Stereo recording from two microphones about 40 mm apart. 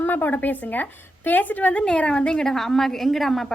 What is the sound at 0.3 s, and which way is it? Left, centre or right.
A woman's voice, left.